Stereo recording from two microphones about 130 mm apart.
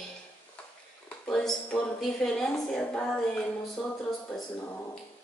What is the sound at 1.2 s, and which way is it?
Speech, 5° left (ahead or behind).